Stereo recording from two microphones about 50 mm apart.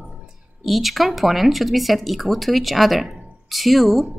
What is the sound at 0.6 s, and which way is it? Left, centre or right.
Speech, centre.